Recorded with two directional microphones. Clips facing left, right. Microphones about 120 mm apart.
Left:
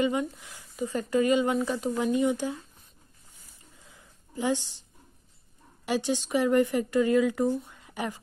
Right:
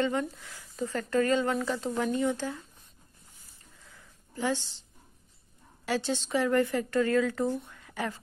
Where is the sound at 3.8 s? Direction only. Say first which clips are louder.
Right 2 dB; 20° left (ahead or behind).